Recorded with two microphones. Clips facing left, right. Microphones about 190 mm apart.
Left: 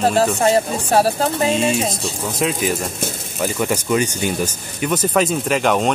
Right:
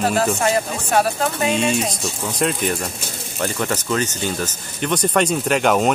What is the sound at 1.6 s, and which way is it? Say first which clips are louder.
Speech: left 1 dB; centre (ahead or behind).